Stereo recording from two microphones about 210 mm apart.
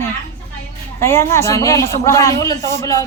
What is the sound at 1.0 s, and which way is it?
A man's voice, 15° left (ahead or behind).